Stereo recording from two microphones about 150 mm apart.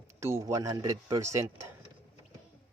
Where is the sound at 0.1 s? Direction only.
20° right (ahead or behind).